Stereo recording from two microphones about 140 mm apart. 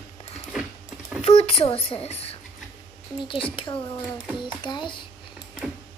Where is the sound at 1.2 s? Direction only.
45° left (ahead or behind).